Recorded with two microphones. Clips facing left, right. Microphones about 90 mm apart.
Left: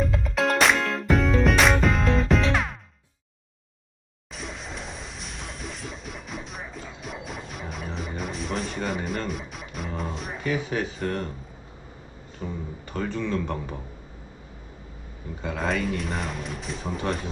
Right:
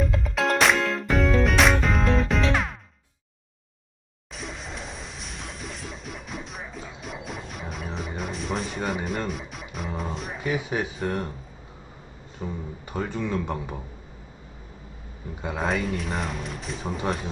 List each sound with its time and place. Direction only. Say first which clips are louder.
0.3 s music: even; centre (ahead or behind)
4.3 s music: even; centre (ahead or behind)
10.4 s speech: even; 15° right (ahead or behind)
12.4 s speech: even; 10° right (ahead or behind)
15.4 s speech: even; 5° right (ahead or behind)